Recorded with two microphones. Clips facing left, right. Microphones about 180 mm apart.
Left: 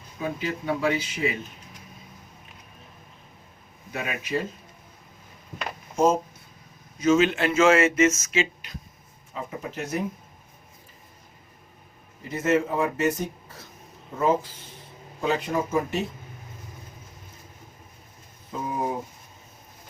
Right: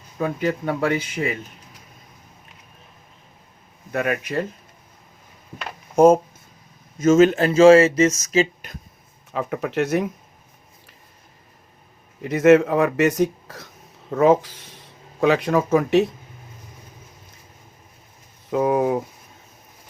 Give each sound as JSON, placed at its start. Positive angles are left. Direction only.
{"t": 0.2, "sound": "speech", "side_deg": -55}
{"t": 3.9, "sound": "speech", "side_deg": -60}
{"t": 7.0, "sound": "speech", "side_deg": -45}
{"t": 9.3, "sound": "speech", "side_deg": -70}
{"t": 12.2, "sound": "speech", "side_deg": -75}
{"t": 18.5, "sound": "speech", "side_deg": -75}